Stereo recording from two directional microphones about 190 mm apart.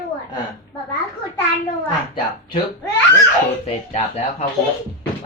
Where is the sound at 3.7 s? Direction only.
35° left (ahead or behind).